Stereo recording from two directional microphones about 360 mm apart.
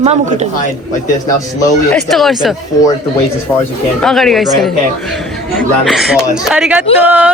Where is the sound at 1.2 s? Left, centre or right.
Centre.